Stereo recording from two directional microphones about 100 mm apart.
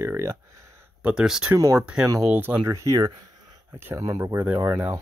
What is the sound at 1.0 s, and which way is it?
Speech, 5° right (ahead or behind).